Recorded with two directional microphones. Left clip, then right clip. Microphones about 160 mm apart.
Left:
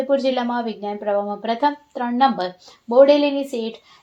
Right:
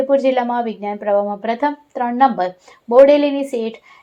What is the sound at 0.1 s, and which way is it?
A woman's voice, 15° right (ahead or behind).